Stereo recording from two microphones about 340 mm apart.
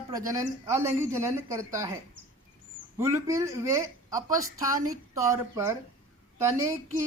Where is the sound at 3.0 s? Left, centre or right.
Centre.